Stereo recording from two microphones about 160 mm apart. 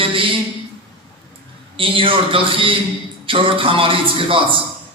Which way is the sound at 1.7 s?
35° right (ahead or behind).